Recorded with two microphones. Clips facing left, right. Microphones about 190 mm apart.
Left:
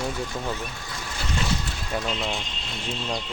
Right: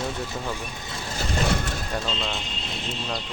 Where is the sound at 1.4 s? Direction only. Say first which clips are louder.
Right 4 dB; 60° right (ahead or behind).